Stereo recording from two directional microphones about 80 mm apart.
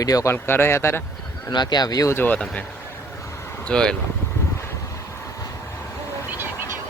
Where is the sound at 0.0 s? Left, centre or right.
Left.